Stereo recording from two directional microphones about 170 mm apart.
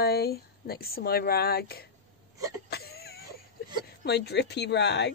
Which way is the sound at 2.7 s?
65° left (ahead or behind).